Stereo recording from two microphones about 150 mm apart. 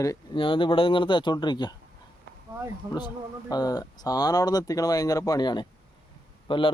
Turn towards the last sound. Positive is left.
turn(degrees=35)  # may be behind; listen again after turning